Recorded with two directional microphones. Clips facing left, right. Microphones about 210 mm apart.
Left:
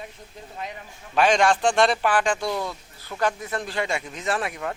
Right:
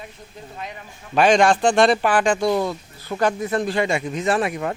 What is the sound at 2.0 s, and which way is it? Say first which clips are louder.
Speech: right 4 dB; 10° right (ahead or behind).